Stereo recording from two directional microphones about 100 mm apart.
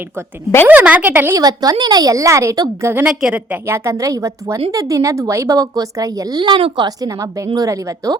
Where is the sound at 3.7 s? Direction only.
30° right (ahead or behind).